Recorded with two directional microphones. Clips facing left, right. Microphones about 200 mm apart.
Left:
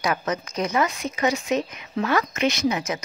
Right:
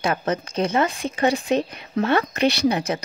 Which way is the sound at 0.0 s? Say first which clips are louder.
Right 2 dB; 30° right (ahead or behind).